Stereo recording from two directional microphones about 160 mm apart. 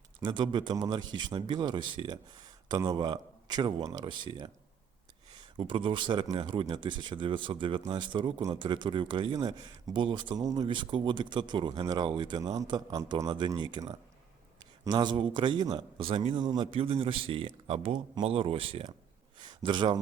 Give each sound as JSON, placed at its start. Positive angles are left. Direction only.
{"t": 0.2, "sound": "a man's voice", "side_deg": -30}